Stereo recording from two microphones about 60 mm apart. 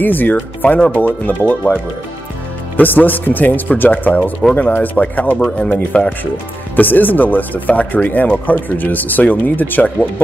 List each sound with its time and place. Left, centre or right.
0.0 s speech: left
2.8 s speech: left